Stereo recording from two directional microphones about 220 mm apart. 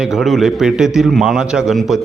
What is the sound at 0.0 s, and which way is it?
A man's voice, centre (ahead or behind).